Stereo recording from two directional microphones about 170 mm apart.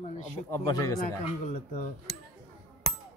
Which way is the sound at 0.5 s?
20° left (ahead or behind).